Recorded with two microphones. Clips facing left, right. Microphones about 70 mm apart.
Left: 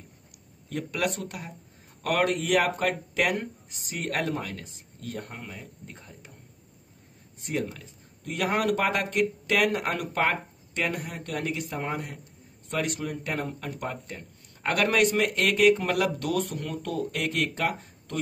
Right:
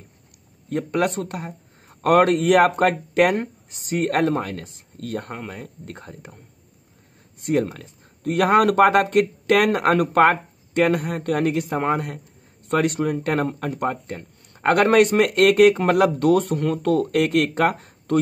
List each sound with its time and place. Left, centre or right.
0.7 s speech: right
7.4 s speech: right